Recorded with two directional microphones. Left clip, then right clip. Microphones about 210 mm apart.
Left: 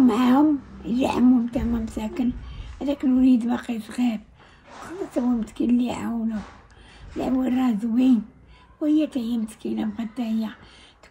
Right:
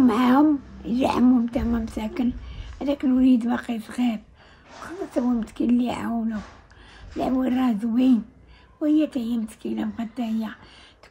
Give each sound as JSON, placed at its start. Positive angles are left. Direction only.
{"t": 0.0, "sound": "a woman's voice", "side_deg": -10}
{"t": 7.2, "sound": "speech", "side_deg": -5}